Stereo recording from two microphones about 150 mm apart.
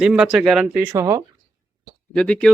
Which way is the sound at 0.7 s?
20° right (ahead or behind).